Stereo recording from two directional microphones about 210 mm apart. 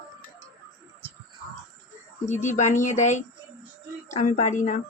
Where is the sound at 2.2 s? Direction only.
35° left (ahead or behind).